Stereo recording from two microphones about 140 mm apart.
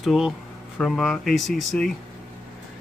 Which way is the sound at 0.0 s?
Centre (ahead or behind).